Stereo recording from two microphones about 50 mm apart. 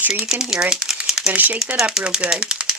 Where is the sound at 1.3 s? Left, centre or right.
Right.